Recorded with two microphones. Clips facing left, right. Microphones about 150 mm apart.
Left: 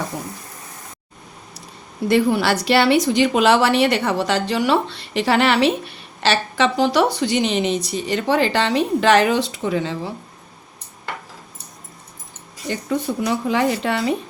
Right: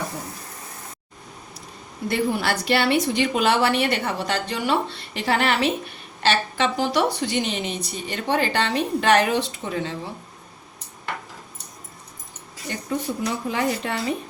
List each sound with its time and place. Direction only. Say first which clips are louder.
2.0 s a woman's voice: left 6 dB; 90° left
13.2 s a woman's voice: left 6 dB; 90° left